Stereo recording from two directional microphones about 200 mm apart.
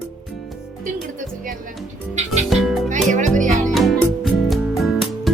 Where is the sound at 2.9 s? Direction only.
40° right (ahead or behind).